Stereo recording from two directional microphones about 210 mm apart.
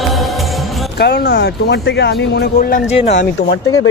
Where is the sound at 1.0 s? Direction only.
50° left (ahead or behind).